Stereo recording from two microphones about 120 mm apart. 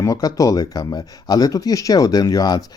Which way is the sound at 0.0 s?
30° left (ahead or behind).